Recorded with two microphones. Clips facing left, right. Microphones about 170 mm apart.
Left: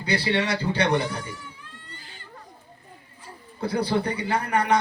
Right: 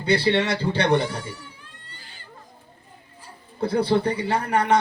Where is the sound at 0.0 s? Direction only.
25° right (ahead or behind).